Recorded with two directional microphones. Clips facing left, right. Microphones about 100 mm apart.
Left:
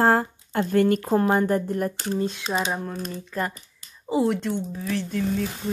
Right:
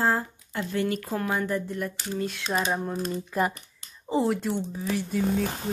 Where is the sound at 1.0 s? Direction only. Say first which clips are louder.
Left 8 dB; 35° left (ahead or behind).